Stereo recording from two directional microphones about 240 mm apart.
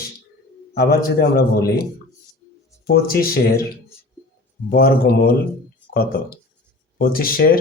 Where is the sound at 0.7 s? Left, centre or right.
Left.